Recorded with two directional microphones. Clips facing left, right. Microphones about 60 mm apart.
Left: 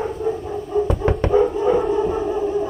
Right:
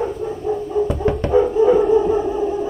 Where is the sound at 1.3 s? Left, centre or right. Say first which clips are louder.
Right 3 dB; centre.